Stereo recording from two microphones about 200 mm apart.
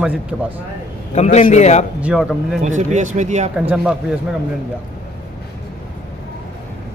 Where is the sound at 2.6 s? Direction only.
35° right (ahead or behind).